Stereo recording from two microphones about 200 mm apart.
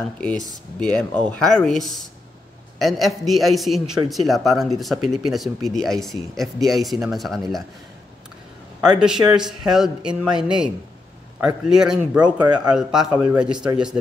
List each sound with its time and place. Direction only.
0.7 s speech: 5° left (ahead or behind)
9.0 s speech: 5° right (ahead or behind)
12.2 s speech: 20° right (ahead or behind)
12.6 s speech: 5° right (ahead or behind)
13.0 s a man's voice: 15° right (ahead or behind)
13.4 s speech: 5° right (ahead or behind)